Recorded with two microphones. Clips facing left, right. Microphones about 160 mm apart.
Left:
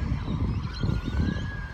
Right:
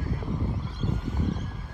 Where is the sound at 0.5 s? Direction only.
75° left (ahead or behind).